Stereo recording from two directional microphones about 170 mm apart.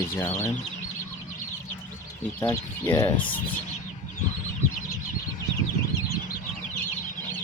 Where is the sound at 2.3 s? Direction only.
20° left (ahead or behind).